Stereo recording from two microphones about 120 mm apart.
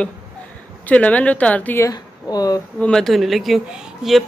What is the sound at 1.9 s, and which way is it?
Speech, 30° left (ahead or behind).